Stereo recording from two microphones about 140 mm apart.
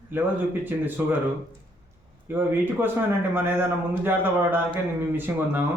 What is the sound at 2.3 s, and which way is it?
Speech, 15° right (ahead or behind).